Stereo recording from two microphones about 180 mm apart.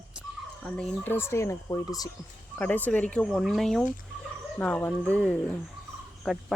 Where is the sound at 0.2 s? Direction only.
5° left (ahead or behind).